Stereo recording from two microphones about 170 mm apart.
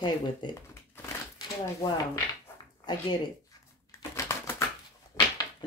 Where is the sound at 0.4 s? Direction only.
25° left (ahead or behind).